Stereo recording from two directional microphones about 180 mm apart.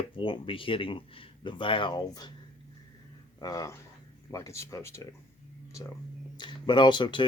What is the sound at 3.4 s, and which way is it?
Speech, 20° left (ahead or behind).